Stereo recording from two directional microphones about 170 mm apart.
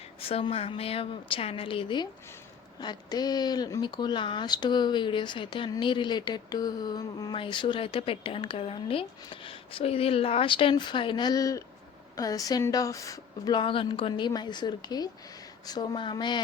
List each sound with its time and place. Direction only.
0.2 s a woman's voice: 35° left (ahead or behind)